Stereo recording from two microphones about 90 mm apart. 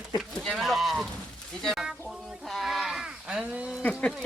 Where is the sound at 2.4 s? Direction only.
Centre (ahead or behind).